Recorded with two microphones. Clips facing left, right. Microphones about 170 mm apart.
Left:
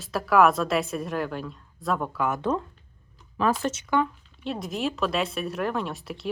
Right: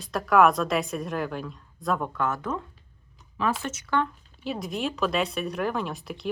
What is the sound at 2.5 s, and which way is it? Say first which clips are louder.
Speech: left 5 dB; 30° left (ahead or behind).